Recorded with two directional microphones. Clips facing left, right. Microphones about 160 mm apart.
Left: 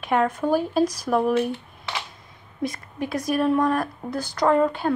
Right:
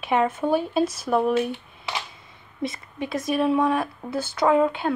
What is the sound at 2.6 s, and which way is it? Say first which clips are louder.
Speech: left 1 dB; centre (ahead or behind).